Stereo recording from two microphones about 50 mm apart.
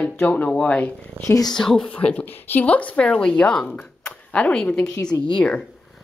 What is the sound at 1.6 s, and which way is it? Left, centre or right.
Speech, centre.